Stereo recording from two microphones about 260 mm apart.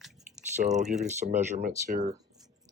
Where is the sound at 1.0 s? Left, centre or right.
Right.